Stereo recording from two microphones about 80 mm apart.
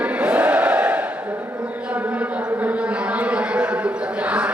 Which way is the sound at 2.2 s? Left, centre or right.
Centre.